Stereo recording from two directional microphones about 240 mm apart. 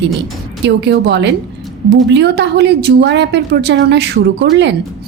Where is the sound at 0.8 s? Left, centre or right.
Right.